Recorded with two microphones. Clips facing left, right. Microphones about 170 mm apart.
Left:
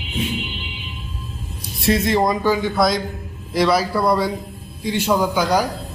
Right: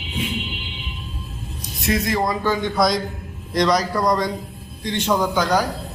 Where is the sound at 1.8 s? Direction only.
30° left (ahead or behind).